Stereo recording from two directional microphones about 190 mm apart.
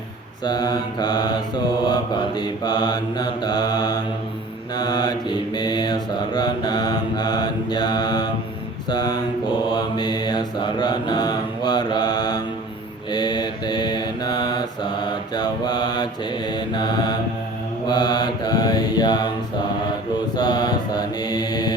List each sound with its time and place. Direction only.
0.4 s mantra: 20° left (ahead or behind)
20.3 s mantra: 20° left (ahead or behind)